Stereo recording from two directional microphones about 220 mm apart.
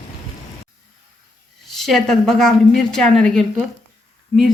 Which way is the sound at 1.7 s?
Centre (ahead or behind).